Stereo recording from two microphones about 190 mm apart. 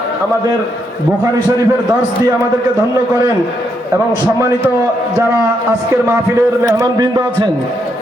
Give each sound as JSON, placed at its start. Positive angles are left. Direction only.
{"t": 5.9, "sound": "a man's voice", "side_deg": -15}